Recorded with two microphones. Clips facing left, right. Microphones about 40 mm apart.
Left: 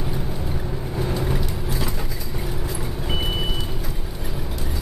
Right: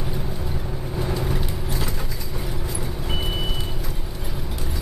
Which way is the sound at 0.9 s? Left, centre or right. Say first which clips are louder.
Left 1 dB; centre.